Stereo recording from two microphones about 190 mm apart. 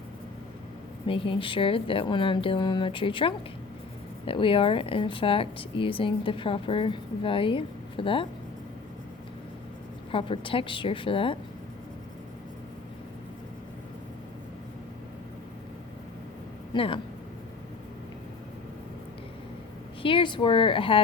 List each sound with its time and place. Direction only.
1.0 s a woman's voice: 25° left (ahead or behind)
10.1 s a woman's voice: 30° left (ahead or behind)
16.7 s a woman's voice: 25° left (ahead or behind)
20.0 s a woman's voice: 25° left (ahead or behind)